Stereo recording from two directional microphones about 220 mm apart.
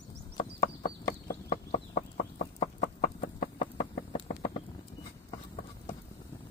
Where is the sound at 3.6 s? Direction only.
25° left (ahead or behind).